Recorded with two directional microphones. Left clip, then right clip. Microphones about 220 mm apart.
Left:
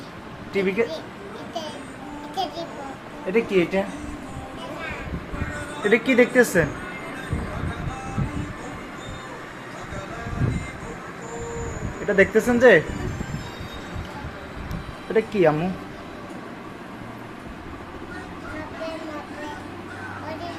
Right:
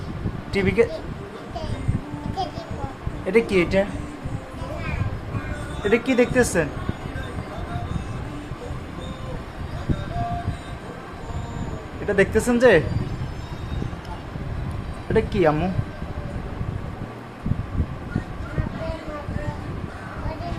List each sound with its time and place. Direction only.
0.5 s speech: 20° right (ahead or behind)
2.4 s a sound: centre (ahead or behind)
3.3 s speech: 20° right (ahead or behind)
5.8 s speech: 5° left (ahead or behind)
12.0 s speech: centre (ahead or behind)
15.1 s speech: 10° right (ahead or behind)